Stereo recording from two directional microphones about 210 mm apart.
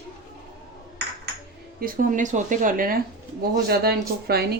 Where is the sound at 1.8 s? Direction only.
40° right (ahead or behind).